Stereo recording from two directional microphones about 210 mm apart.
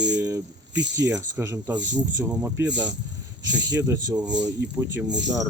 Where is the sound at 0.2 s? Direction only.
15° right (ahead or behind).